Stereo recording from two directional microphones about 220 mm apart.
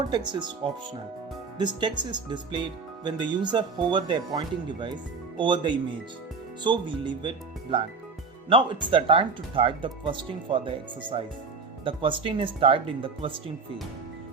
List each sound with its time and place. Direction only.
0.1 s speech: 20° right (ahead or behind)